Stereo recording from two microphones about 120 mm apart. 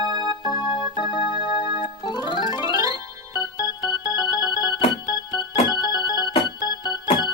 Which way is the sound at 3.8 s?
35° left (ahead or behind).